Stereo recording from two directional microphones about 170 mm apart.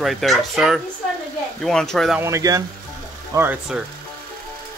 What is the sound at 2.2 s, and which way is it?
Speech, 20° right (ahead or behind).